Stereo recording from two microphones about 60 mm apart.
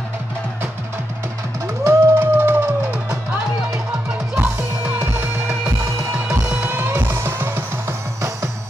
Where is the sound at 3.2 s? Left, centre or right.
Centre.